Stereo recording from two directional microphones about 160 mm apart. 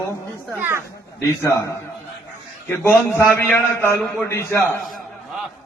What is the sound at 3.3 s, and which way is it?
A man's voice, 15° left (ahead or behind).